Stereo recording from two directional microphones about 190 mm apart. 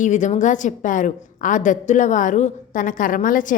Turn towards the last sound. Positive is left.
turn(degrees=45)  # may be behind; listen again after turning